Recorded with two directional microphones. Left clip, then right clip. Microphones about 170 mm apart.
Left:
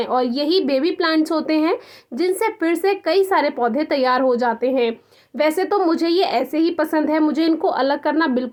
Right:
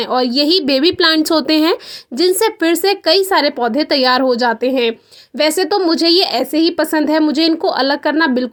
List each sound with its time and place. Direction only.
0.0 s a woman's voice: 40° right (ahead or behind)